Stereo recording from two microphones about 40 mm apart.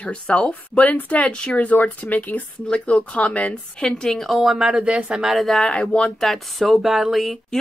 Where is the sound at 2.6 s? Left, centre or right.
Left.